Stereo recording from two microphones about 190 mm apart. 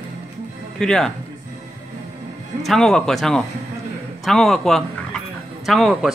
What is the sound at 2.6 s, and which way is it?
Speech, centre (ahead or behind).